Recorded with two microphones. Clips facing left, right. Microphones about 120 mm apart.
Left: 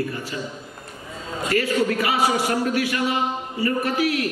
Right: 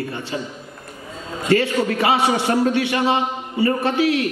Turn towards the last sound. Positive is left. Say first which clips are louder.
# right 4 dB
turn(degrees=-25)  # may be behind; listen again after turning